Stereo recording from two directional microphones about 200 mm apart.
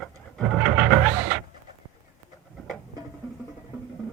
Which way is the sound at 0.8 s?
10° right (ahead or behind).